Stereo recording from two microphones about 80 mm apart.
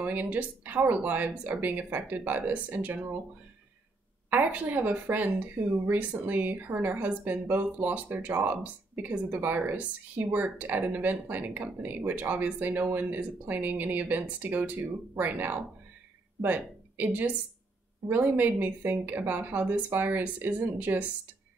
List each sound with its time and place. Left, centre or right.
0.0 s speech: right
4.3 s speech: right